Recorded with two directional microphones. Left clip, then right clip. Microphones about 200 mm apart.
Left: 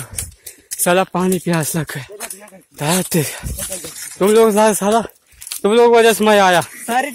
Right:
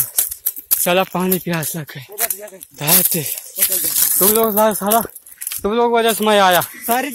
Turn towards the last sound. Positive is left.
turn(degrees=10)  # may be behind; listen again after turning